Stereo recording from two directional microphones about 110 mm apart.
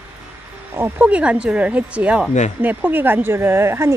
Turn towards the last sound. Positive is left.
turn(degrees=-25)  # may be behind; listen again after turning